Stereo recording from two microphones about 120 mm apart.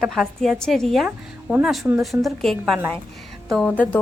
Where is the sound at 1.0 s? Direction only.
10° right (ahead or behind).